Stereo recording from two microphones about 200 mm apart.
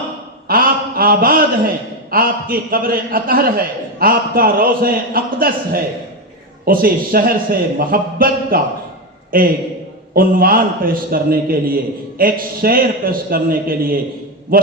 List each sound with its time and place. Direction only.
0.4 s a man's voice: 45° right (ahead or behind)